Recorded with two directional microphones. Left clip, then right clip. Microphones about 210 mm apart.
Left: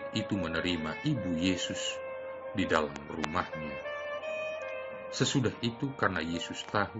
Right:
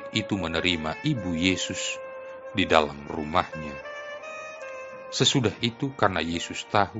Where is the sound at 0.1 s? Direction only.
40° right (ahead or behind).